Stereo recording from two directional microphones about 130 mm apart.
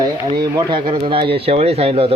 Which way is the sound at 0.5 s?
40° right (ahead or behind).